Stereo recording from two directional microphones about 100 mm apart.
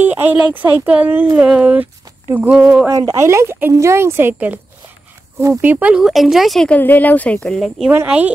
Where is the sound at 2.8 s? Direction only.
30° right (ahead or behind); by 6.6 s centre (ahead or behind).